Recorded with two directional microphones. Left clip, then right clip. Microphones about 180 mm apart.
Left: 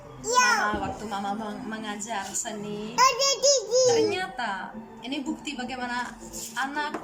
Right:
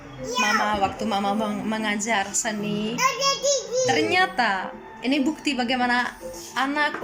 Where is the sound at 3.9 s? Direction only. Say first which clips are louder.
Right 5 dB; 25° right (ahead or behind).